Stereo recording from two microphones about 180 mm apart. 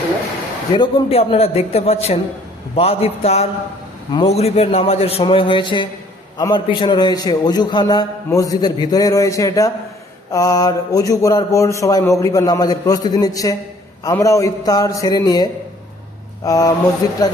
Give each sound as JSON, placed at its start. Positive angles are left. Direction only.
{"t": 0.7, "sound": "a man's voice", "side_deg": 30}